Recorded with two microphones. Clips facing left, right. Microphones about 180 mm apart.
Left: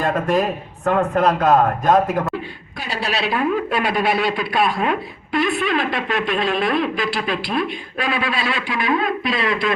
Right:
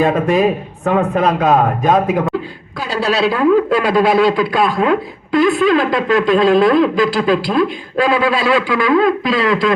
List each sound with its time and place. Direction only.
0.0 s a man's voice: 10° right (ahead or behind)
3.3 s speech: 90° right